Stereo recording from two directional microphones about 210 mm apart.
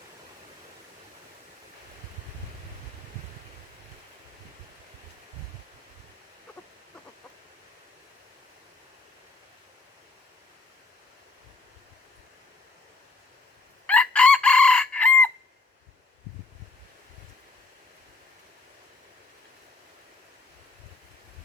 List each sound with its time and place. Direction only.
13.8 s chicken: 5° left (ahead or behind)